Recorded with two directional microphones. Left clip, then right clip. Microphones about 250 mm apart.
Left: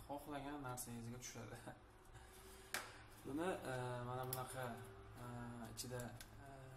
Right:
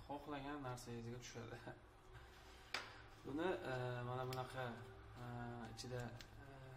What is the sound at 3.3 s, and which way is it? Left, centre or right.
Speech, centre.